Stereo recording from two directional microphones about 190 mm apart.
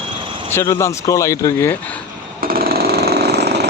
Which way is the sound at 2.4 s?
50° right (ahead or behind).